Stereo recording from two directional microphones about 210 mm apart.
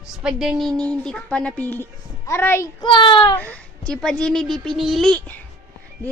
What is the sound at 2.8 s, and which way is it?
Speech, 20° left (ahead or behind).